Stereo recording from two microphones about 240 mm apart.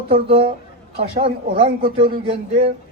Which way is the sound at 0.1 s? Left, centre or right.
Right.